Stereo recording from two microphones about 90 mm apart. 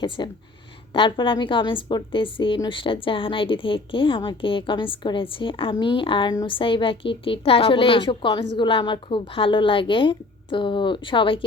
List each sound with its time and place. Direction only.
0.2 s speech: 50° left (ahead or behind)
0.9 s a woman's voice: 70° left (ahead or behind)